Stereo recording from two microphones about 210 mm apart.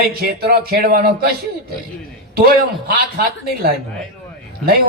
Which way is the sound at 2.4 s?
45° right (ahead or behind).